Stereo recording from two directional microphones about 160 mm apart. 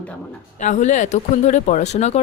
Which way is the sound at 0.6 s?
50° left (ahead or behind).